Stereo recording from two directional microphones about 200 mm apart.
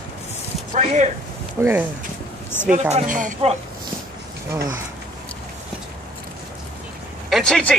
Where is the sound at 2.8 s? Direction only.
35° right (ahead or behind).